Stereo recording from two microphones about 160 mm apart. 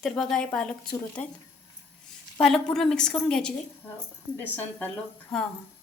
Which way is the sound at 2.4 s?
5° left (ahead or behind).